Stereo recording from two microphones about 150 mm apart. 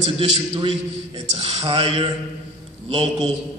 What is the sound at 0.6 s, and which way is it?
A man's voice, 35° right (ahead or behind).